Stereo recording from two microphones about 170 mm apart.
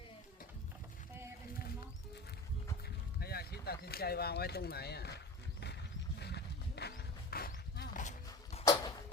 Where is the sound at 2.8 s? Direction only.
65° left (ahead or behind); by 8.1 s 50° left (ahead or behind).